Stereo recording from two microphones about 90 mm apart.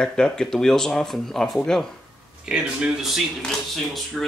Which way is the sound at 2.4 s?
10° right (ahead or behind).